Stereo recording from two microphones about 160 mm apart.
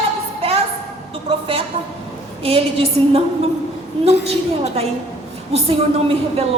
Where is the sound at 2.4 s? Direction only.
35° right (ahead or behind).